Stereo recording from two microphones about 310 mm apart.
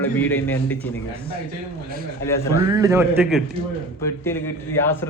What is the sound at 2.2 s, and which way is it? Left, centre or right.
Speech, centre.